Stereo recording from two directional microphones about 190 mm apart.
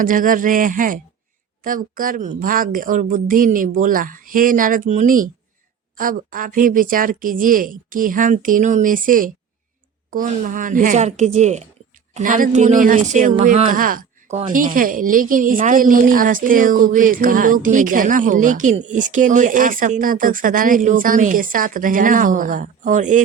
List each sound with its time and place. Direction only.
0.0 s a woman's voice: 45° right (ahead or behind)